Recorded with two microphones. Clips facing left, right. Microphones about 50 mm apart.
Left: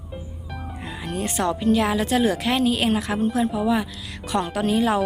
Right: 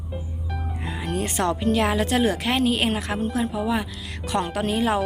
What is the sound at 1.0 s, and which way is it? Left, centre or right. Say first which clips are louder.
A woman's voice: even; right.